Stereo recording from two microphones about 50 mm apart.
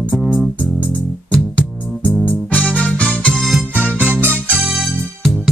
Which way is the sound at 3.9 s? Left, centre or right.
Right.